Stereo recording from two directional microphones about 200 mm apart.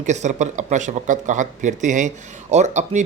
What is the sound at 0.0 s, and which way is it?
Speech, 35° right (ahead or behind).